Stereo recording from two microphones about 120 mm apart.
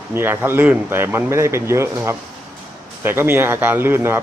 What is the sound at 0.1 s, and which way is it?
Speech, 20° right (ahead or behind).